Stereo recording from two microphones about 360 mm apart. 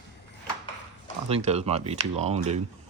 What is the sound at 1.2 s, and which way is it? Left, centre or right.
Speech, centre.